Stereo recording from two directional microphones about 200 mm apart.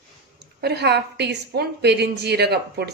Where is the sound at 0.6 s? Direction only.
55° right (ahead or behind).